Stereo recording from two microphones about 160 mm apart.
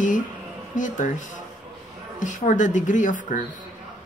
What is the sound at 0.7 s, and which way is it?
Speech, 55° left (ahead or behind).